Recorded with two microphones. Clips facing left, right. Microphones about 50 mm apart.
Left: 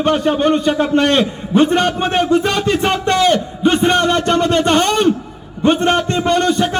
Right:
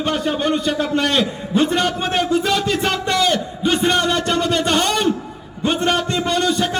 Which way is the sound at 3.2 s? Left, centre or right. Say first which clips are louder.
Left 5 dB; left.